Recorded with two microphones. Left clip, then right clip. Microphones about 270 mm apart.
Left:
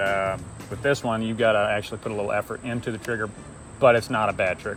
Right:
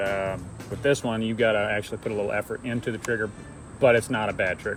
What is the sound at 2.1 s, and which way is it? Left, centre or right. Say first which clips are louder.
Speech: right 1 dB; left.